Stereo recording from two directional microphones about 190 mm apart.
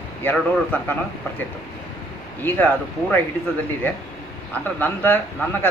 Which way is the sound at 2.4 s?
10° left (ahead or behind).